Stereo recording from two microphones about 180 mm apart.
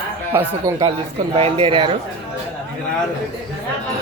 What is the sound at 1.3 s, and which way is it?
Speech, 30° right (ahead or behind).